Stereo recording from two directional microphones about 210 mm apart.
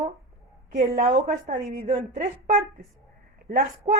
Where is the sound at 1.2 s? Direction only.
35° right (ahead or behind).